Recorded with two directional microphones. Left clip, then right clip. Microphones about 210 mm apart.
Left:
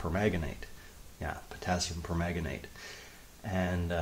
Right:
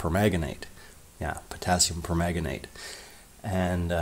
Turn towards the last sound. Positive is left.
turn(degrees=-40)  # may be behind; listen again after turning